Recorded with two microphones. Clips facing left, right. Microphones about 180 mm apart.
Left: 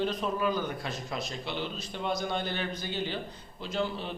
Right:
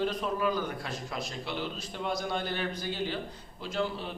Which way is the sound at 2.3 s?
5° right (ahead or behind).